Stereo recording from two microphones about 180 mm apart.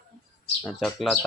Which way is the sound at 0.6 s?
Centre (ahead or behind).